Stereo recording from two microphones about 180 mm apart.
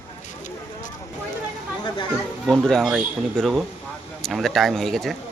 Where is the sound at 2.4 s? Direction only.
Centre (ahead or behind).